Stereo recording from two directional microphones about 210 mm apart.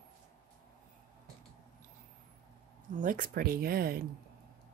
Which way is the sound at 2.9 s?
40° right (ahead or behind).